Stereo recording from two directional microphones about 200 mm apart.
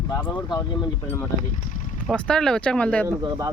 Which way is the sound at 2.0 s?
5° left (ahead or behind).